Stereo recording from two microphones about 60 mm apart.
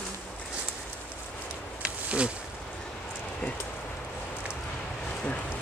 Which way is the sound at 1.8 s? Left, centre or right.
Centre.